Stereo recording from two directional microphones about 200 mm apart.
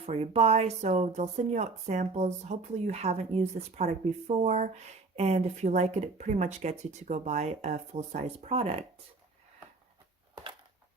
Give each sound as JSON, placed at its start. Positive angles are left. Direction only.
{"t": 0.0, "sound": "a woman's voice", "side_deg": -30}